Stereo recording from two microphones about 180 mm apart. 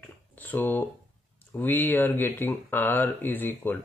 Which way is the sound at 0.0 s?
10° left (ahead or behind).